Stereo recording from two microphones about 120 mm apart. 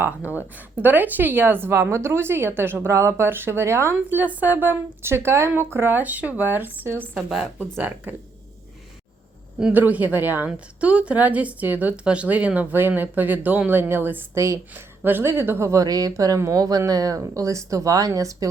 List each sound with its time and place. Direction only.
0.3 s a woman's voice: 15° right (ahead or behind)
7.3 s speech: 5° right (ahead or behind)
7.8 s a woman's voice: 15° right (ahead or behind)
9.6 s a woman's voice: 10° right (ahead or behind); by 18.4 s 30° right (ahead or behind)